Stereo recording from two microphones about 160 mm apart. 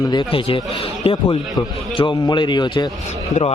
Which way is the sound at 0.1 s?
30° left (ahead or behind).